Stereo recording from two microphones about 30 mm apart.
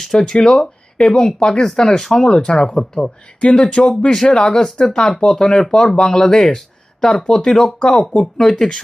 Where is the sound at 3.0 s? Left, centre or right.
Left; by 7.0 s centre.